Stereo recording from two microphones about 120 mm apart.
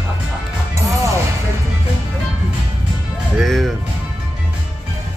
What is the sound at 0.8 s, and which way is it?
Music, 25° right (ahead or behind).